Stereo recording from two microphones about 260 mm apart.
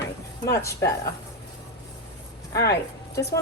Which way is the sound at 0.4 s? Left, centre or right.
Centre.